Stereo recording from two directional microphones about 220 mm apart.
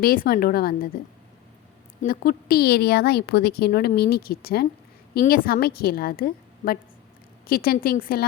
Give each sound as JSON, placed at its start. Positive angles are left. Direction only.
{"t": 0.0, "sound": "a woman's voice", "side_deg": 40}
{"t": 2.0, "sound": "a woman's voice", "side_deg": 40}